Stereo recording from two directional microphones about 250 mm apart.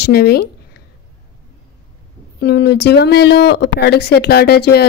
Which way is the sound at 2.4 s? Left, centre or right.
Left.